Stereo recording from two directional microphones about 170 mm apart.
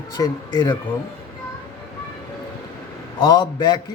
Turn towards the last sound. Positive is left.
turn(degrees=25)  # may be behind; listen again after turning